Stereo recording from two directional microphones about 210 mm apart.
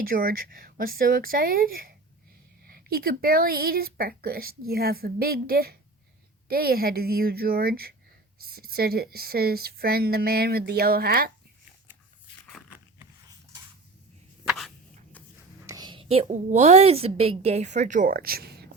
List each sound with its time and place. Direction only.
0.0 s speech: 45° right (ahead or behind)
14.4 s a sound: centre (ahead or behind)
15.6 s a woman's voice: 15° right (ahead or behind); by 18.7 s 50° right (ahead or behind)